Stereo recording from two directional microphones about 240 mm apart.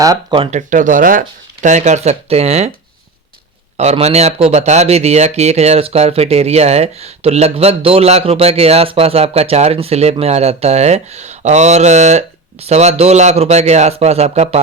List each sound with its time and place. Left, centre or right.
0.0 s a man's voice: centre
3.8 s a man's voice: right